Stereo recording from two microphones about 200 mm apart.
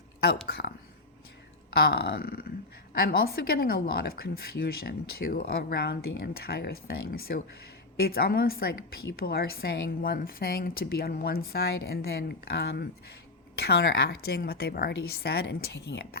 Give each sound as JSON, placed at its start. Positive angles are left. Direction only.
{"t": 0.4, "sound": "speech", "side_deg": 50}
{"t": 1.9, "sound": "speech", "side_deg": 50}